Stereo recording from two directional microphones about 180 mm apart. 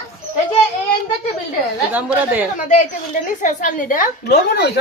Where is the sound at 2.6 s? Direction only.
45° left (ahead or behind).